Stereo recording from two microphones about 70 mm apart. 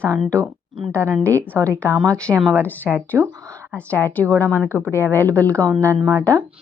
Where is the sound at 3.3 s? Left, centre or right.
Right.